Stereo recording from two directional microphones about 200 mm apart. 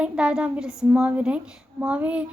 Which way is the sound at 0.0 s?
5° right (ahead or behind).